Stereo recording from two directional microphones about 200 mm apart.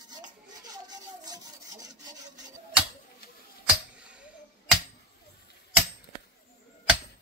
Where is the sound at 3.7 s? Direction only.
5° right (ahead or behind).